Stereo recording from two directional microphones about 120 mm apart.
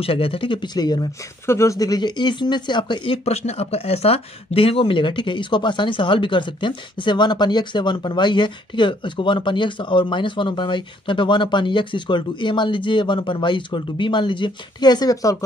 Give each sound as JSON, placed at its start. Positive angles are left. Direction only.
{"t": 0.0, "sound": "speech", "side_deg": 50}
{"t": 1.4, "sound": "speech", "side_deg": 25}